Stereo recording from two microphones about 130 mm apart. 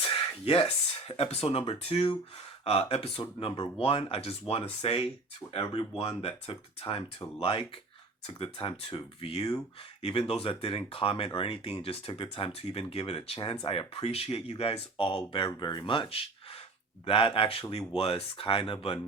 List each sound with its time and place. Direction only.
0.0 s speech: 45° left (ahead or behind)
15.4 s speech: 35° left (ahead or behind)